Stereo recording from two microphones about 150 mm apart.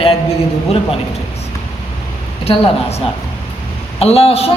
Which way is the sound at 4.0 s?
40° left (ahead or behind).